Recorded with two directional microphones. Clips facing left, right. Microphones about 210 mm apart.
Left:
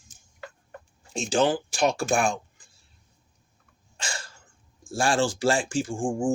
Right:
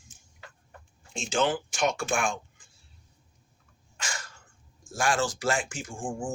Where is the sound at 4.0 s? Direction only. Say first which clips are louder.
Left 2 dB; 30° left (ahead or behind).